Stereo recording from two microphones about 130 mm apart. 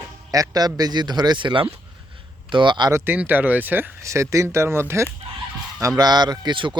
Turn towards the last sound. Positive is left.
turn(degrees=-35)  # may be behind; listen again after turning